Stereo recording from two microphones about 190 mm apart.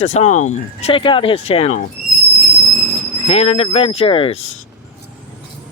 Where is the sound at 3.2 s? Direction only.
30° left (ahead or behind).